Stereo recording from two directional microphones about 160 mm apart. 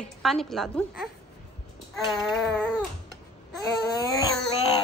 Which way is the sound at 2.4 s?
5° left (ahead or behind).